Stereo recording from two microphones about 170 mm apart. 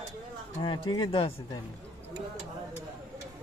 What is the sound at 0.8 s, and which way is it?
Speech, 30° left (ahead or behind).